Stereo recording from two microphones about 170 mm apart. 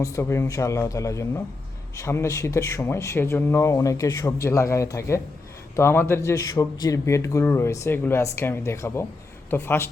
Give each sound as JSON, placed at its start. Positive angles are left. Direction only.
{"t": 0.0, "sound": "speech", "side_deg": 15}